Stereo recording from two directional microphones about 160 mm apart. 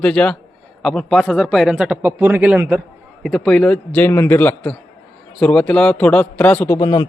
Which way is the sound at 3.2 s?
5° left (ahead or behind).